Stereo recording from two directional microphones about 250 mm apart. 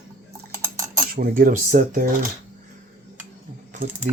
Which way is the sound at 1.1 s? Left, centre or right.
Right.